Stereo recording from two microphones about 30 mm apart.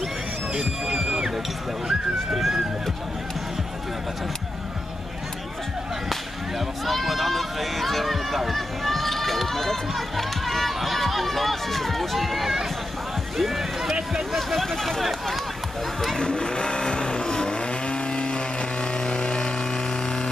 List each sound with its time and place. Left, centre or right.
0.6 s music: centre
1.9 s speech: centre
6.9 s a sound: centre
14.3 s a sound: centre
16.2 s vehicle: left
17.6 s chainsaw: left